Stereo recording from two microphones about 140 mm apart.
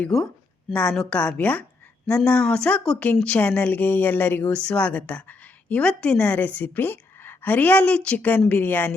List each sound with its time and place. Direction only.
0.0 s speech: 5° left (ahead or behind)